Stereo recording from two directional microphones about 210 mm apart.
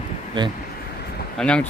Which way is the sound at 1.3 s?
5° left (ahead or behind).